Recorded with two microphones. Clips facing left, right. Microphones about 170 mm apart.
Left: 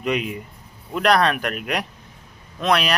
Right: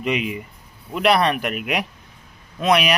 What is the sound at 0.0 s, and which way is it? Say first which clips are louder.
Speech: even; 5° right (ahead or behind).